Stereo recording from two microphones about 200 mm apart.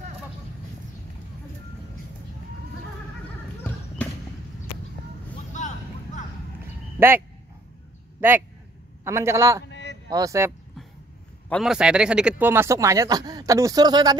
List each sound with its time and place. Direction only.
5.5 s a sound: 40° left (ahead or behind)
7.0 s speech: 10° right (ahead or behind)
9.0 s speech: 15° right (ahead or behind)
9.7 s a sound: 60° left (ahead or behind)
10.0 s speech: 15° right (ahead or behind)
11.4 s speech: centre (ahead or behind); by 14.1 s 20° right (ahead or behind)